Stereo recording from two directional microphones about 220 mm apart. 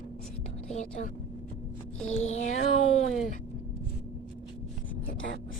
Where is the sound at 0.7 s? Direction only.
30° left (ahead or behind).